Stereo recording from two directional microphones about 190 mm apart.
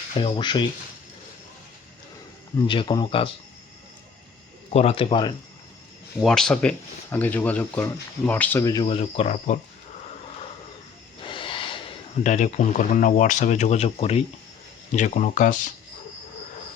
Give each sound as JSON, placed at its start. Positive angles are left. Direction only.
{"t": 0.2, "sound": "speech", "side_deg": 25}
{"t": 2.6, "sound": "speech", "side_deg": 25}
{"t": 4.7, "sound": "speech", "side_deg": 30}
{"t": 6.1, "sound": "speech", "side_deg": 0}
{"t": 8.9, "sound": "speech", "side_deg": 30}
{"t": 11.2, "sound": "a sound", "side_deg": 25}
{"t": 12.2, "sound": "speech", "side_deg": 40}